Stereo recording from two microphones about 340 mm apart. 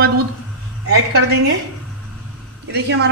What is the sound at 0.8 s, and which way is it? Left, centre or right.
Speech, right.